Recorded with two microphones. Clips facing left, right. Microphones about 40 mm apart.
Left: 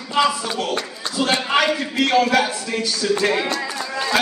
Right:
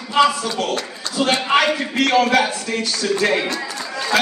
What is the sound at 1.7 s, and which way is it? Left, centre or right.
Speech, right.